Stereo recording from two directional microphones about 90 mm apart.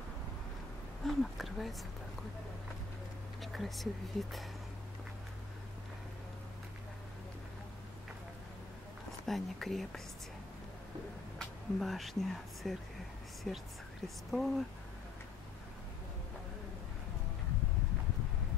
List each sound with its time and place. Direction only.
1.0 s a sound: centre (ahead or behind)
3.5 s speech: centre (ahead or behind)
9.2 s speech: centre (ahead or behind)
11.3 s speech: centre (ahead or behind)